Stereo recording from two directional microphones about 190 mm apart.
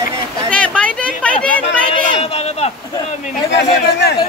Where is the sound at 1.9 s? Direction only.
30° left (ahead or behind).